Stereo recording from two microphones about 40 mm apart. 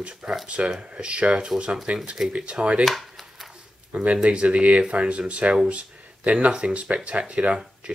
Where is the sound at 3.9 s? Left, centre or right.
Right.